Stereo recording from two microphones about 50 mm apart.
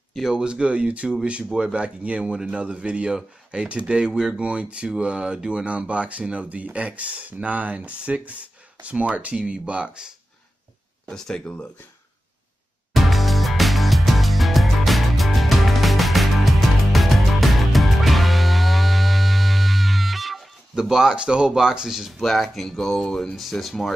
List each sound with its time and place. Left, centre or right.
0.3 s speech: centre
11.1 s speech: centre
12.9 s music: centre
20.9 s speech: centre
23.3 s speech: centre